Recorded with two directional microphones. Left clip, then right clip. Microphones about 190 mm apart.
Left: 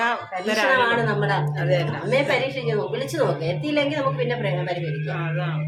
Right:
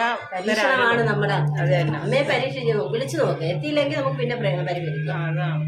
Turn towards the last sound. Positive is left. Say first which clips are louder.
# even
turn(degrees=0)  # may be behind; listen again after turning